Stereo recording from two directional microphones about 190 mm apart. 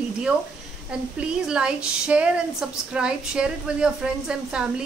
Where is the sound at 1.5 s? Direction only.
5° right (ahead or behind).